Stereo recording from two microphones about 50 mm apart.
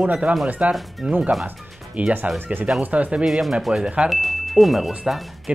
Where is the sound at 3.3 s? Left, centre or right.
Centre.